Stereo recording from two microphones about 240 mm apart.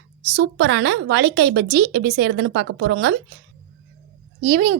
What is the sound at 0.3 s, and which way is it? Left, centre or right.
A woman's voice, right.